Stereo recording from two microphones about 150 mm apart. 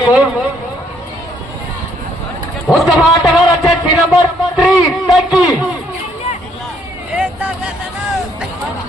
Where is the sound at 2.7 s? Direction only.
20° left (ahead or behind).